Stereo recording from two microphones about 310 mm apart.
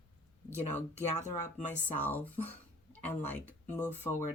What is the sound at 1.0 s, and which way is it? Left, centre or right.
Speech, left.